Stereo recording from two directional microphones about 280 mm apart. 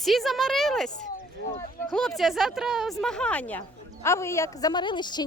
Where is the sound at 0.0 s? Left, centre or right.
Centre.